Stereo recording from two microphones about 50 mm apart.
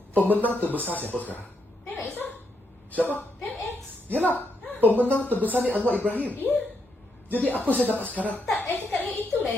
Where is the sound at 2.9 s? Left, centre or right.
Left.